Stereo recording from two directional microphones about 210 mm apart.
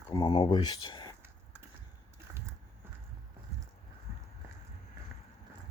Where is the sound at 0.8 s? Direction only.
20° left (ahead or behind).